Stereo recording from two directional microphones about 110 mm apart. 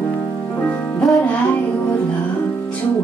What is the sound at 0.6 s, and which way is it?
Music, 15° left (ahead or behind).